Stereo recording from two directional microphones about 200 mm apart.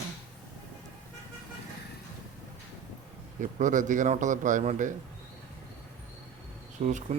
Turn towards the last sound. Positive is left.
turn(degrees=-35)  # may be behind; listen again after turning